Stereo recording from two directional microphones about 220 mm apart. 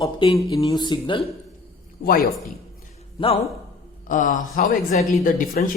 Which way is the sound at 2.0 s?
40° left (ahead or behind).